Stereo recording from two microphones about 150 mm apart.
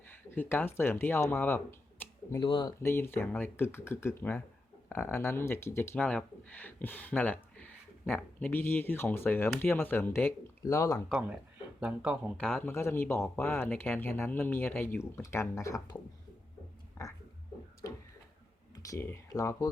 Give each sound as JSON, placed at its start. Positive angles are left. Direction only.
{"t": 0.3, "sound": "speech", "side_deg": 15}
{"t": 2.4, "sound": "speech", "side_deg": 30}
{"t": 2.8, "sound": "speech", "side_deg": 15}
{"t": 11.1, "sound": "speech", "side_deg": -10}
{"t": 12.4, "sound": "speech", "side_deg": 5}
{"t": 17.0, "sound": "a sound", "side_deg": 20}
{"t": 18.8, "sound": "speech", "side_deg": 20}